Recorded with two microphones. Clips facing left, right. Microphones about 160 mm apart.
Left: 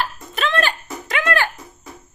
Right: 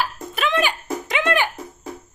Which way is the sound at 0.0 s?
10° right (ahead or behind).